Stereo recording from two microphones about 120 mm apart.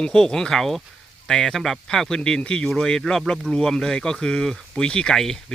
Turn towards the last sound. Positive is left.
turn(degrees=5)  # may be behind; listen again after turning